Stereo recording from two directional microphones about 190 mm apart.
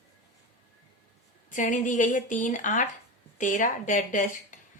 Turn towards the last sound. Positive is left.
turn(degrees=45)  # may be behind; listen again after turning